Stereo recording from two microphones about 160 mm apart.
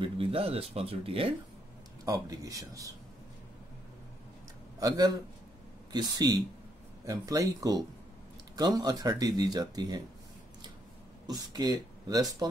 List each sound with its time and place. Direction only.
0.0 s speech: 35° right (ahead or behind)
2.0 s speech: 25° right (ahead or behind)
4.7 s speech: 25° right (ahead or behind)
11.2 s speech: 25° right (ahead or behind)